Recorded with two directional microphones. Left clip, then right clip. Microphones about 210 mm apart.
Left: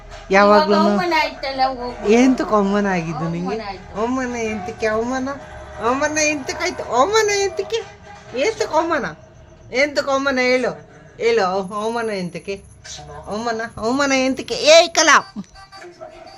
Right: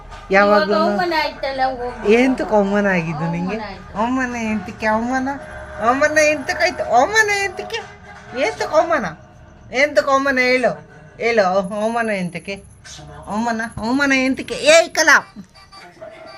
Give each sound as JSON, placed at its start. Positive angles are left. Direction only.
{"t": 0.3, "sound": "speech", "side_deg": 20}
{"t": 1.1, "sound": "speech", "side_deg": 0}
{"t": 2.0, "sound": "a woman's voice", "side_deg": 15}
{"t": 13.8, "sound": "speech", "side_deg": 20}